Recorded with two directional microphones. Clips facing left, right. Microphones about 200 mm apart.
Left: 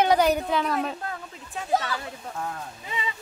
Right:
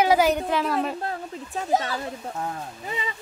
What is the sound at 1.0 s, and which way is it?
Speech, 35° right (ahead or behind).